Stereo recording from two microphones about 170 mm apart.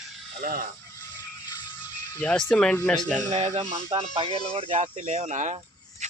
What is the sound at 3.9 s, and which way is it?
Speech, 30° right (ahead or behind).